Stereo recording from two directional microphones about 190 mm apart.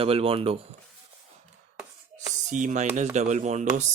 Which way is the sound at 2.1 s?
40° right (ahead or behind).